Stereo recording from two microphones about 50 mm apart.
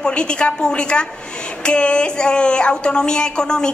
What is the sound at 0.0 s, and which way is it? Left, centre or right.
Speech, centre.